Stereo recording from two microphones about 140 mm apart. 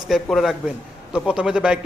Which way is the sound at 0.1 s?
Centre (ahead or behind).